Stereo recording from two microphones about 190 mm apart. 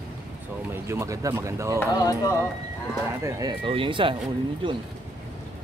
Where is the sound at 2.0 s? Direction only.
20° left (ahead or behind).